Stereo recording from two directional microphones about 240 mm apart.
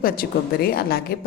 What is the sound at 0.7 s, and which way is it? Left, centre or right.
Speech, left.